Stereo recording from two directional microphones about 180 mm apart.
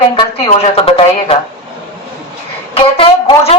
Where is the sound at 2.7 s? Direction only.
30° left (ahead or behind).